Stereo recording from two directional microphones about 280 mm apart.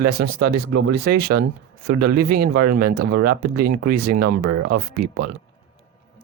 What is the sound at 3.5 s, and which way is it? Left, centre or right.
Speech, right.